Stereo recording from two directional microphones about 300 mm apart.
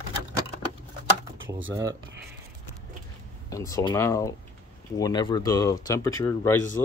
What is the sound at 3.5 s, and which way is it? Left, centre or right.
Speech, centre.